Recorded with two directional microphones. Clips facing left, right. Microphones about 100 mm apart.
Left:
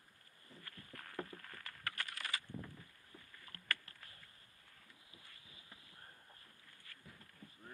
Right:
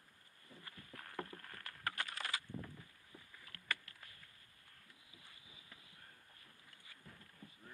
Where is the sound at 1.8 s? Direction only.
25° right (ahead or behind).